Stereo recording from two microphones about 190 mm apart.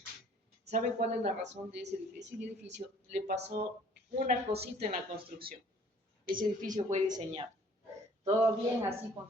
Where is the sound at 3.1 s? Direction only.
35° right (ahead or behind).